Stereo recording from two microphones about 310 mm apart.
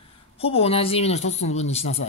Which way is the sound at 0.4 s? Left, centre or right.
Centre.